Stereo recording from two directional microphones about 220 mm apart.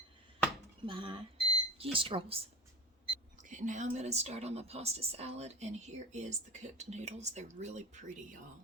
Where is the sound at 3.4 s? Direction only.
35° right (ahead or behind).